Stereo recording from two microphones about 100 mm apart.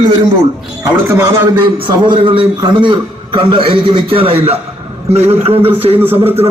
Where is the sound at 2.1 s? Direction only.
55° right (ahead or behind).